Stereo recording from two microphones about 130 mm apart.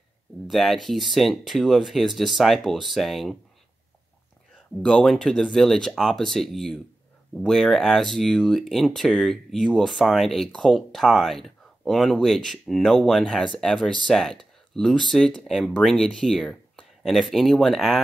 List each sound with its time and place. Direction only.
0.5 s speech: centre (ahead or behind)
4.8 s speech: 5° left (ahead or behind)